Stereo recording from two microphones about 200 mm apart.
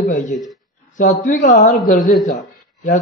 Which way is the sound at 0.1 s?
40° left (ahead or behind).